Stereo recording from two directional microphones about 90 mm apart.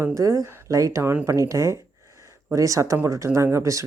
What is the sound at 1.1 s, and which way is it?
Speech, 20° right (ahead or behind).